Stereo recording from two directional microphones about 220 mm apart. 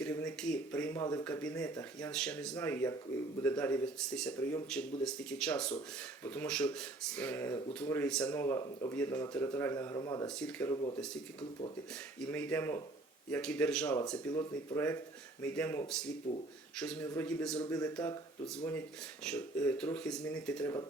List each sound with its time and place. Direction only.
0.0 s speech: 5° left (ahead or behind)
2.1 s speech: 5° left (ahead or behind)
10.2 s speech: 5° left (ahead or behind)
12.2 s speech: 5° left (ahead or behind)
16.3 s speech: 30° left (ahead or behind)
16.7 s speech: 5° left (ahead or behind)
17.6 s speech: 15° left (ahead or behind)